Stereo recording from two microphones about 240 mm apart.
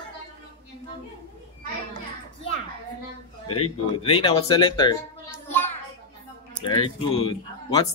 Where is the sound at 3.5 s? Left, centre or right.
Left.